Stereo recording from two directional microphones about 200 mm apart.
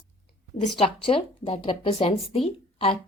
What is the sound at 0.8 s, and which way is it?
Speech, 25° left (ahead or behind).